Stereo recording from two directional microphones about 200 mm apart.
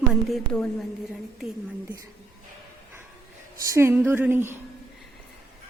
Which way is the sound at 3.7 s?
10° right (ahead or behind).